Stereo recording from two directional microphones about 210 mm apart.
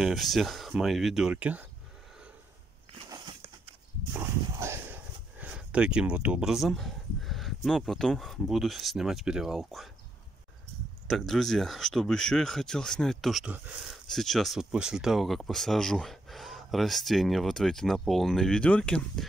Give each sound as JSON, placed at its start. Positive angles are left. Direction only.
{"t": 0.0, "sound": "speech", "side_deg": 0}
{"t": 3.1, "sound": "a sound", "side_deg": -20}
{"t": 4.1, "sound": "speech", "side_deg": -10}
{"t": 11.1, "sound": "speech", "side_deg": 0}